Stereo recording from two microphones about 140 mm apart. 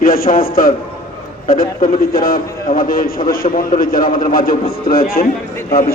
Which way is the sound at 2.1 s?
90° left.